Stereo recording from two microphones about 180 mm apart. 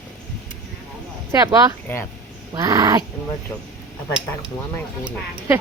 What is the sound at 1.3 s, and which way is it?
Speech, 20° right (ahead or behind).